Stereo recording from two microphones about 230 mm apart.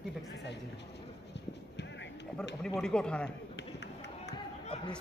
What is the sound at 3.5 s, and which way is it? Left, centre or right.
Run, left.